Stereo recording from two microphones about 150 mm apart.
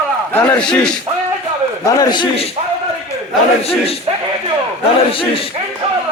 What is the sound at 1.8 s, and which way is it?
Speech, 25° left (ahead or behind).